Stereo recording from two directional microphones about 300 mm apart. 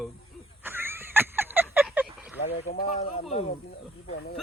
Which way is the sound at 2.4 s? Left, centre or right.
Left.